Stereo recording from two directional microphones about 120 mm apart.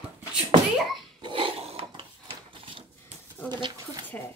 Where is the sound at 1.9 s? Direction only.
45° right (ahead or behind).